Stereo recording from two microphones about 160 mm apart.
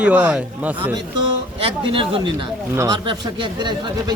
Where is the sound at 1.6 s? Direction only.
35° right (ahead or behind).